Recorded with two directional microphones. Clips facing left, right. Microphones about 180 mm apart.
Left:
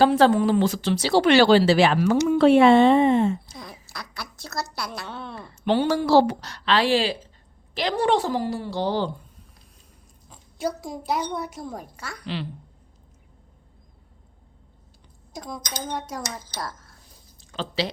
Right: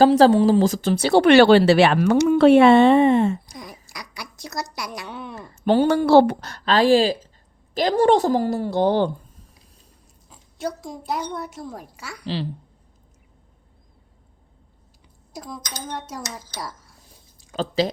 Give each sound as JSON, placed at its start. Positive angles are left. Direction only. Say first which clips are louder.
{"t": 0.0, "sound": "speech", "louder": "right 4 dB", "side_deg": -35}
{"t": 3.4, "sound": "speech", "louder": "right 2 dB", "side_deg": -15}
{"t": 5.5, "sound": "a woman's voice", "louder": "right 4 dB", "side_deg": -45}
{"t": 5.9, "sound": "a woman's voice", "louder": "right 4 dB", "side_deg": -60}
{"t": 10.2, "sound": "a woman's voice", "louder": "left 1 dB", "side_deg": 5}
{"t": 12.2, "sound": "a woman's voice", "louder": "right 4 dB", "side_deg": -35}
{"t": 15.3, "sound": "a woman's voice", "louder": "left 1 dB", "side_deg": -5}
{"t": 16.6, "sound": "a sound", "louder": "even", "side_deg": -10}
{"t": 17.5, "sound": "speech", "louder": "right 6 dB", "side_deg": -45}